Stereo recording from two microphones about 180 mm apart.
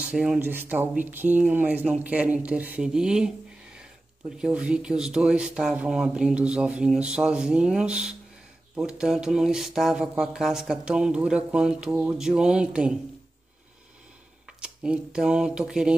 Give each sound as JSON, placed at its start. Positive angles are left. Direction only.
{"t": 0.0, "sound": "speech", "side_deg": -5}
{"t": 14.6, "sound": "speech", "side_deg": -5}